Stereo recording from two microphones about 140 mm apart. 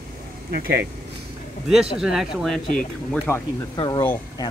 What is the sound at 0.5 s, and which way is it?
Speech, 90° right.